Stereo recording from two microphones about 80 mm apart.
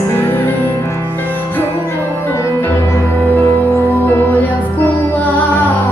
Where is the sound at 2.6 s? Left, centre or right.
Left.